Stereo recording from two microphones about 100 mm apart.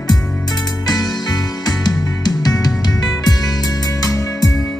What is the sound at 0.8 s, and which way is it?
Music, 40° left (ahead or behind).